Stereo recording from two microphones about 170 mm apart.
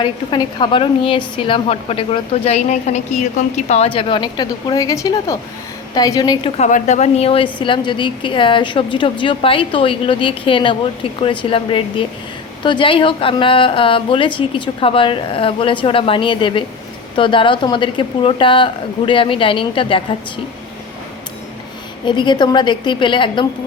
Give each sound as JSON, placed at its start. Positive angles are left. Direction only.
{"t": 0.0, "sound": "a woman's voice", "side_deg": 30}
{"t": 6.6, "sound": "a woman's voice", "side_deg": 45}
{"t": 22.0, "sound": "speech", "side_deg": 25}